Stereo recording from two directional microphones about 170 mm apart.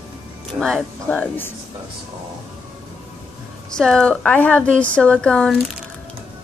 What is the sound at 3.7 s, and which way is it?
A woman's voice, 5° left (ahead or behind).